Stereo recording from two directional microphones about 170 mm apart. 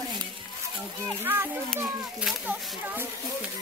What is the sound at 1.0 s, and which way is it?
Speech, 15° right (ahead or behind).